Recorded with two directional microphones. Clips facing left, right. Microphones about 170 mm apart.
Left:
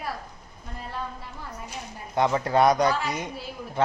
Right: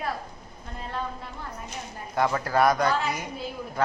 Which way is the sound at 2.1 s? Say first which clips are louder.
Left 2 dB; 20° left (ahead or behind).